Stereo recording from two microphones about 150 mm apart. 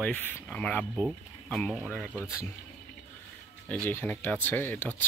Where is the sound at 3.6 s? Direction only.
10° left (ahead or behind).